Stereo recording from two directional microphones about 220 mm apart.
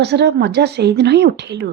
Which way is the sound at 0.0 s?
50° right (ahead or behind).